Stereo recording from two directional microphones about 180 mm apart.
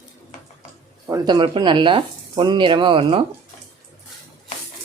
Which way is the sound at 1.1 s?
25° right (ahead or behind).